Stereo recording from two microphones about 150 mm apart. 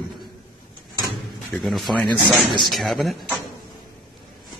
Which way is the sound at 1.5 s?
Centre (ahead or behind).